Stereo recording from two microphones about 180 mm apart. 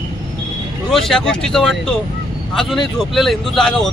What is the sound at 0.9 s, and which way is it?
Speech, centre (ahead or behind).